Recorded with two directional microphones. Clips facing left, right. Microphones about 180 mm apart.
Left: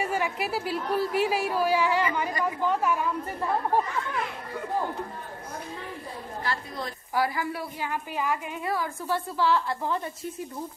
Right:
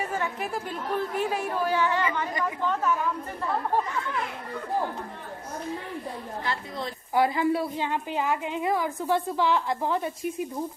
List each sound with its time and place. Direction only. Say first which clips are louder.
0.0 s speech: left 2 dB; 10° left (ahead or behind)
6.4 s a woman's voice: even; 20° right (ahead or behind)